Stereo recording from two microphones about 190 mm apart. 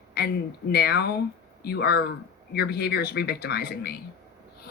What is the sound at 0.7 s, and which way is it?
Speech, 55° left (ahead or behind).